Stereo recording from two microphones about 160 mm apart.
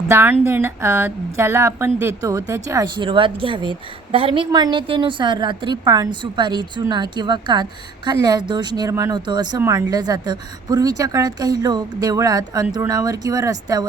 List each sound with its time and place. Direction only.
0.1 s a woman's voice: 15° right (ahead or behind)